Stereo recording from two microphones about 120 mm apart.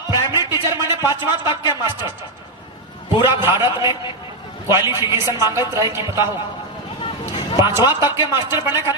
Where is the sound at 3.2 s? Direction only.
20° right (ahead or behind).